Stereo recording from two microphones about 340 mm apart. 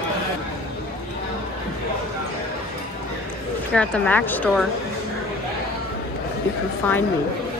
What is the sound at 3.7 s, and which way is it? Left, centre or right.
Speech, centre.